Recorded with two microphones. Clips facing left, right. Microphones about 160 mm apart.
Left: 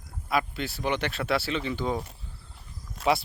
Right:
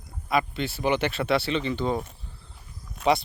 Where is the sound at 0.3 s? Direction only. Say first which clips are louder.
Right 2 dB; centre (ahead or behind).